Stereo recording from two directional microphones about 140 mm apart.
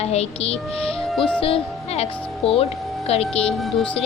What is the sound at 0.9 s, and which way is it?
Music, 5° left (ahead or behind).